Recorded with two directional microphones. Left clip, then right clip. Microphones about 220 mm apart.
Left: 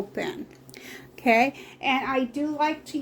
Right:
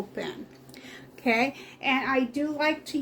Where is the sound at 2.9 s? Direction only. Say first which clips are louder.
Right 1 dB; centre (ahead or behind).